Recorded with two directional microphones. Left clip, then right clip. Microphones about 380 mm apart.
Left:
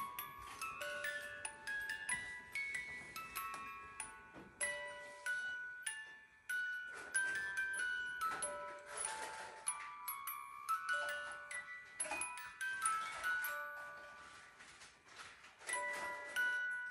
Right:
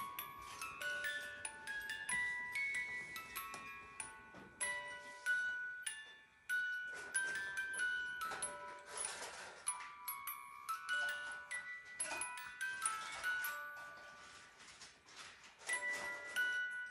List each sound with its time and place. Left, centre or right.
0.0 s music: centre
9.7 s glockenspiel: centre
12.2 s music: centre
16.3 s music: centre